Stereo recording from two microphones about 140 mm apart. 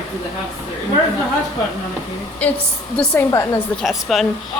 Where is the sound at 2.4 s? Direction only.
10° left (ahead or behind).